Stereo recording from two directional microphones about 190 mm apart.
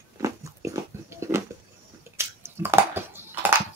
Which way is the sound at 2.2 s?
10° right (ahead or behind).